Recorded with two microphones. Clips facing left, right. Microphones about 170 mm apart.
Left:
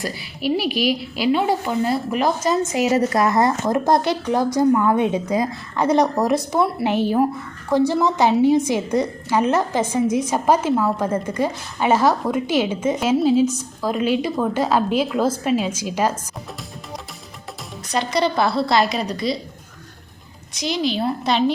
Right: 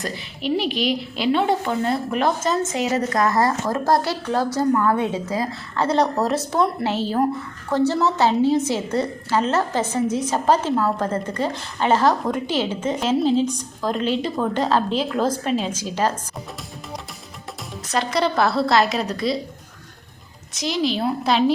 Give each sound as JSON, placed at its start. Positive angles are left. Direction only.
{"t": 0.2, "sound": "a woman's voice", "side_deg": 5}
{"t": 17.9, "sound": "a woman's voice", "side_deg": 0}
{"t": 20.6, "sound": "a woman's voice", "side_deg": 0}